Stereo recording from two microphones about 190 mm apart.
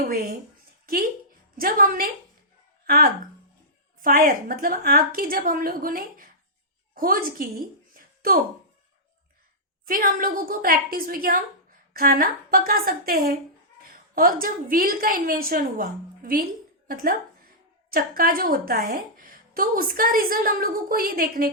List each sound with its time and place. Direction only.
0.1 s a woman's voice: 55° right (ahead or behind)
1.5 s a woman's voice: 50° right (ahead or behind)
9.8 s a woman's voice: 50° right (ahead or behind)